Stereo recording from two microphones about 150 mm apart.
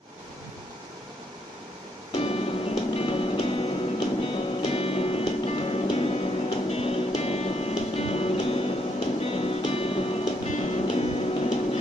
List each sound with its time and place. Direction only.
2.1 s music: 40° left (ahead or behind)